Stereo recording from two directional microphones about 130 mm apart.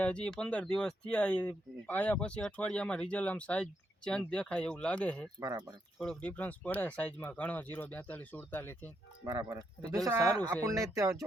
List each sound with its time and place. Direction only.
0.0 s speech: 10° left (ahead or behind)
9.2 s speech: 30° right (ahead or behind)